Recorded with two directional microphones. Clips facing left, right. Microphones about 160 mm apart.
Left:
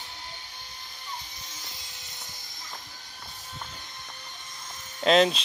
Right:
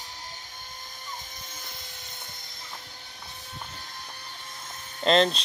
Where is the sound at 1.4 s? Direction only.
50° right (ahead or behind).